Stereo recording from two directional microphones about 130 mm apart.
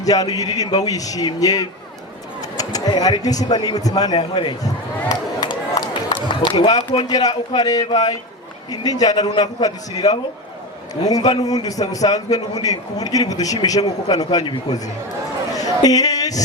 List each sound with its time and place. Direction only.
0.0 s a man's voice: 30° left (ahead or behind)
4.2 s a man's voice: 40° left (ahead or behind)
4.6 s a man's voice: 30° left (ahead or behind)
15.5 s a sound: 30° left (ahead or behind)